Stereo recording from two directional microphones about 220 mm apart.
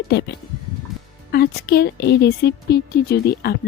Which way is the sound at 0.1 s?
50° left (ahead or behind).